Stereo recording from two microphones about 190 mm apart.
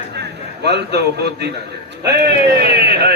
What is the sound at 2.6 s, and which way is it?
Speech, 60° right (ahead or behind).